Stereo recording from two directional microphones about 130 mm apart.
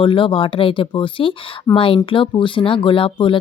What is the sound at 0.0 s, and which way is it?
A woman's voice, 40° left (ahead or behind).